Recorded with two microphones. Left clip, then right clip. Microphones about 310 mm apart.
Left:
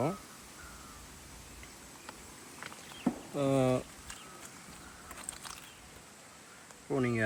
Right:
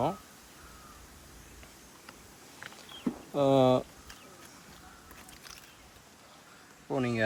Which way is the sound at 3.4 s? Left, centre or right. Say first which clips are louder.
Right 6 dB; centre.